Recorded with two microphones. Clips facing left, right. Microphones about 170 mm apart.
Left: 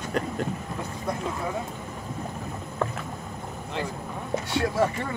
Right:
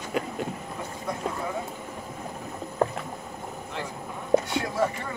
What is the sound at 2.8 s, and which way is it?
Rowboat, 35° right (ahead or behind).